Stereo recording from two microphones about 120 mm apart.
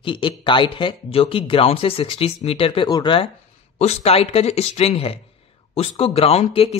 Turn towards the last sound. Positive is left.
turn(degrees=55)  # may be behind; listen again after turning